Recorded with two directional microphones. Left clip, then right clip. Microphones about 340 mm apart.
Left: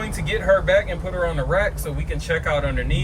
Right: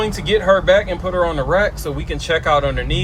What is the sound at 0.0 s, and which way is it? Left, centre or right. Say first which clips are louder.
Speech: right 7 dB; centre.